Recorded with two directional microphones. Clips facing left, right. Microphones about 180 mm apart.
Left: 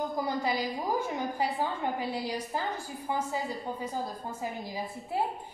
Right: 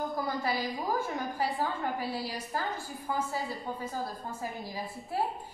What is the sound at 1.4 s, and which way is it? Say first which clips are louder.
A woman's voice: even; 20° left (ahead or behind).